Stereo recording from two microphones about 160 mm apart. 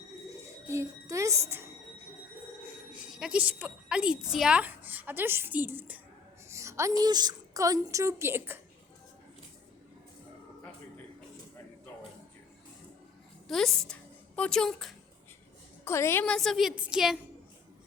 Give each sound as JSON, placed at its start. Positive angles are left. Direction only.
{"t": 0.7, "sound": "a child's voice", "side_deg": -20}
{"t": 3.2, "sound": "a woman's voice", "side_deg": -5}
{"t": 13.5, "sound": "a woman's voice", "side_deg": 0}
{"t": 15.8, "sound": "a woman's voice", "side_deg": 15}
{"t": 16.2, "sound": "a woman's voice", "side_deg": 5}